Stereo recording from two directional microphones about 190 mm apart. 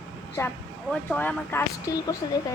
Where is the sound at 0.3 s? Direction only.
10° left (ahead or behind).